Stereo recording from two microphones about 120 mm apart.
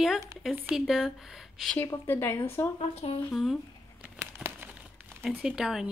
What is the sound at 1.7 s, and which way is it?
Speech, 15° left (ahead or behind).